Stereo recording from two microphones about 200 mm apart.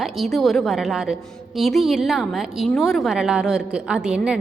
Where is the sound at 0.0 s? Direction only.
Centre (ahead or behind).